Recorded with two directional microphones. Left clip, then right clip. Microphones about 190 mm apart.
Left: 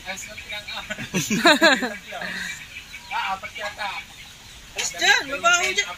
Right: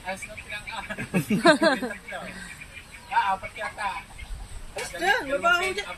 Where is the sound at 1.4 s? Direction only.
15° left (ahead or behind).